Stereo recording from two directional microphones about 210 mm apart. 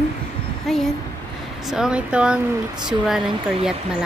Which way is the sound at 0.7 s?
Centre (ahead or behind).